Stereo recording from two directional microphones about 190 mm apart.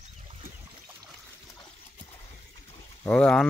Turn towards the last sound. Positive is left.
turn(degrees=5)  # may be behind; listen again after turning